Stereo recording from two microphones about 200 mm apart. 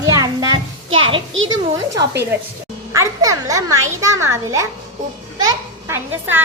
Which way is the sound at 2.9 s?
15° right (ahead or behind).